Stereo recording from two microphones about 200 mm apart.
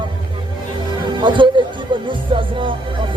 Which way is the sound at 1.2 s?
25° right (ahead or behind).